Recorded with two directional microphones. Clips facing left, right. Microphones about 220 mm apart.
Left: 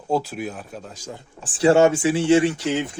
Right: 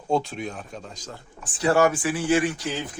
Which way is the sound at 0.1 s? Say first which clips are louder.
Left 1 dB; 5° left (ahead or behind).